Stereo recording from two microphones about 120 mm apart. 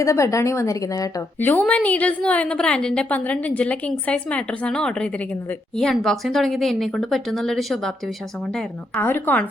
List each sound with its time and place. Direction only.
0.0 s a woman's voice: 25° left (ahead or behind)
1.4 s a woman's voice: 15° left (ahead or behind)
9.0 s a woman's voice: 15° left (ahead or behind)